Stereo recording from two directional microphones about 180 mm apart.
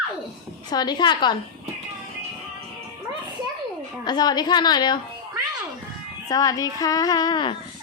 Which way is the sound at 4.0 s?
25° left (ahead or behind).